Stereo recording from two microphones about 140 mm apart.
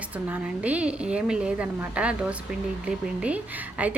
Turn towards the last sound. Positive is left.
turn(degrees=-10)  # may be behind; listen again after turning